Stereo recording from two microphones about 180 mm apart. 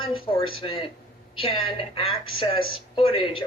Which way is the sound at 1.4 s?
30° left (ahead or behind).